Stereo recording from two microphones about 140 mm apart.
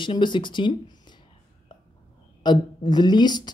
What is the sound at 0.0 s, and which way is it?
Speech, 35° left (ahead or behind).